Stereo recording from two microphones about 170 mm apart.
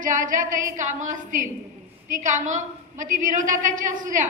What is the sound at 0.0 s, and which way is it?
A woman's voice, 50° right (ahead or behind).